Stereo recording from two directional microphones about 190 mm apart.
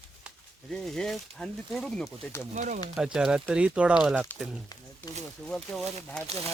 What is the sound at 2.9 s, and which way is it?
Speech, 5° right (ahead or behind).